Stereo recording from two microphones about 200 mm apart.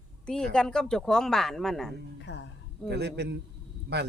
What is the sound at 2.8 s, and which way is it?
Speech, 55° right (ahead or behind).